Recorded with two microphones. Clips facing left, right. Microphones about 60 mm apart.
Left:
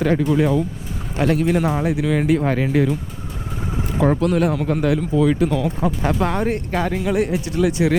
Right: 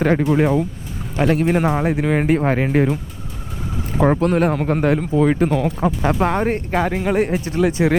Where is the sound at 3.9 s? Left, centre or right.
Right.